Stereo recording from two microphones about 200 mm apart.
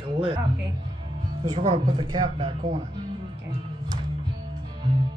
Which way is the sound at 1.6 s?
30° right (ahead or behind).